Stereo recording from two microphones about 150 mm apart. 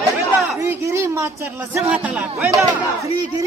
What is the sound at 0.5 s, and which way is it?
A man's voice, 20° right (ahead or behind).